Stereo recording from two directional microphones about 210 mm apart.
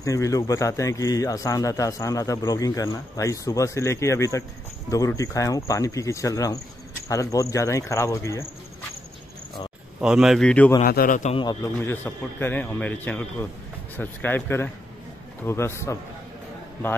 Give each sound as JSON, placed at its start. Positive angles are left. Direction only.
{"t": 0.0, "sound": "a man's voice", "side_deg": 15}
{"t": 9.9, "sound": "speech", "side_deg": -5}
{"t": 10.8, "sound": "a man's voice", "side_deg": 40}
{"t": 11.3, "sound": "a man's voice", "side_deg": 20}